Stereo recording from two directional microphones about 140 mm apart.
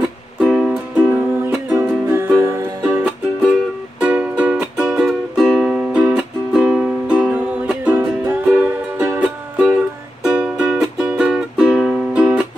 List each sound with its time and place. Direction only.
0.4 s music: 5° right (ahead or behind)
4.0 s music: 10° right (ahead or behind)